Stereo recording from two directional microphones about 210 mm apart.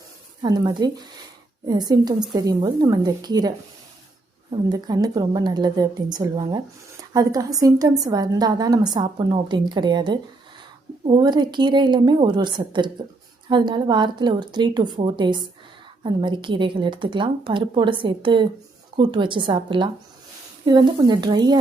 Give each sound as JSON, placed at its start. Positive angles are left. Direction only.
{"t": 0.4, "sound": "a woman's voice", "side_deg": -20}
{"t": 4.7, "sound": "a woman's voice", "side_deg": -20}